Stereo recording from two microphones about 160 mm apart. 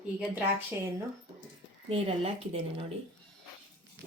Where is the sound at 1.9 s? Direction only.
40° right (ahead or behind).